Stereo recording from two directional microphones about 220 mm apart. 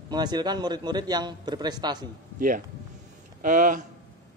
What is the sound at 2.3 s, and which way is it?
Speech, 40° right (ahead or behind).